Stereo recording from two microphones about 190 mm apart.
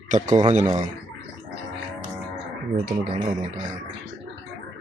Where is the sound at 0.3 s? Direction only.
25° right (ahead or behind).